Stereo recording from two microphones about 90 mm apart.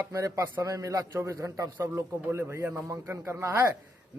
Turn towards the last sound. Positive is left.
turn(degrees=-30)  # may be behind; listen again after turning